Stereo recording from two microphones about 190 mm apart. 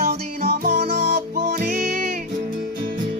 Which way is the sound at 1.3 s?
50° right (ahead or behind).